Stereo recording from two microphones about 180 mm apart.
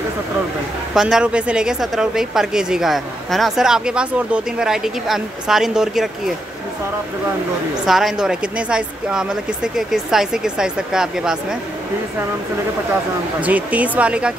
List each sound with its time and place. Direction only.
0.9 s speech: 5° right (ahead or behind)
7.8 s speech: centre (ahead or behind)
13.4 s speech: 10° right (ahead or behind)